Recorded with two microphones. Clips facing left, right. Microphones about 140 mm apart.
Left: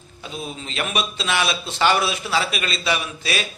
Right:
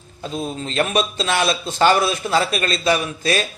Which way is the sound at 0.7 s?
40° right (ahead or behind).